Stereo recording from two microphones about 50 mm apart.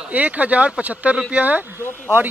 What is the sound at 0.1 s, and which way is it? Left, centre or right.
Speech, right.